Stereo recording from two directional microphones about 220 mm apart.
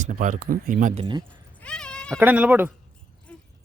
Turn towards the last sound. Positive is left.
turn(degrees=5)  # may be behind; listen again after turning